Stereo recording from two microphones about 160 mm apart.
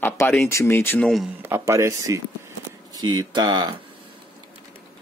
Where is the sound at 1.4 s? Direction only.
15° right (ahead or behind).